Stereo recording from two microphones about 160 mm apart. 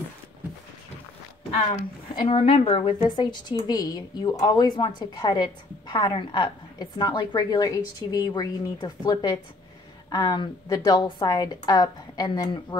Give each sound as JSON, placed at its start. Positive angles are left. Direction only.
{"t": 2.2, "sound": "a woman's voice", "side_deg": 35}